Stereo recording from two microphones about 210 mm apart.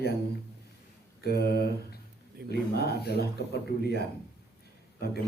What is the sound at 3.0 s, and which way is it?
A man's voice, 50° left (ahead or behind).